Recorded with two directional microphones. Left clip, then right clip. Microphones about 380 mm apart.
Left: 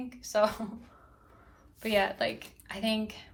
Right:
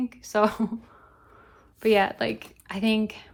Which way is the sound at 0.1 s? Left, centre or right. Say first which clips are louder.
Right 2 dB; centre.